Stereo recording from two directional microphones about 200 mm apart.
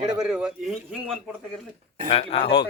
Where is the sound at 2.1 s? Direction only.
30° left (ahead or behind).